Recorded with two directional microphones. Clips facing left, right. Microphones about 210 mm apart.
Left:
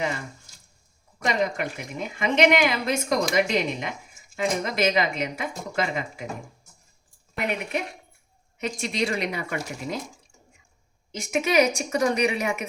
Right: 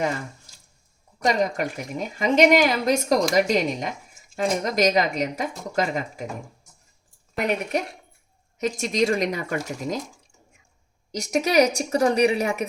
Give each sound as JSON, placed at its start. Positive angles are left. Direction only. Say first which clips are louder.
{"t": 1.2, "sound": "a woman's voice", "louder": "right 3 dB", "side_deg": -40}
{"t": 7.3, "sound": "a woman's voice", "louder": "right 4 dB", "side_deg": -40}
{"t": 11.1, "sound": "a woman's voice", "louder": "right 2 dB", "side_deg": -40}